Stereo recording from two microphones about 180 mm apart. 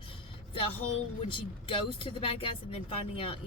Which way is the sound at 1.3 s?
30° left (ahead or behind).